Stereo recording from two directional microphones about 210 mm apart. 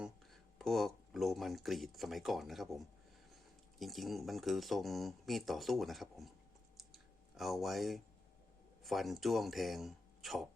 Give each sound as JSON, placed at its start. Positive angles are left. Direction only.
{"t": 0.0, "sound": "speech", "side_deg": 0}
{"t": 6.7, "sound": "clicking", "side_deg": 0}
{"t": 8.8, "sound": "speech", "side_deg": 0}